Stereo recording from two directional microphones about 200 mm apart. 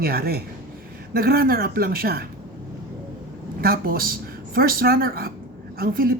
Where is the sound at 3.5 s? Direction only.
50° right (ahead or behind).